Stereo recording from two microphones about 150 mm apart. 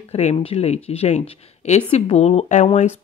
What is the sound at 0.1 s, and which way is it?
Speech, 45° left (ahead or behind).